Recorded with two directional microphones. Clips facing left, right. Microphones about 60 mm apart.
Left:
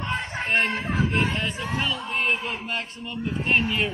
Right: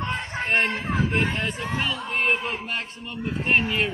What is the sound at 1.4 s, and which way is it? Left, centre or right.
A man's voice, right.